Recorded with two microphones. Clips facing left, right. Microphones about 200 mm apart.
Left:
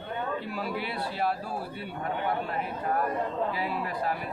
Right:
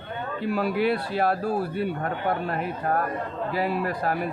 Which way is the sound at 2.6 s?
60° right (ahead or behind).